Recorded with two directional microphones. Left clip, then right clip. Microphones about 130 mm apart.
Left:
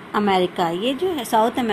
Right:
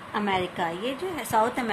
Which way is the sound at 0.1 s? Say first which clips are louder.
Left 8 dB; 25° left (ahead or behind).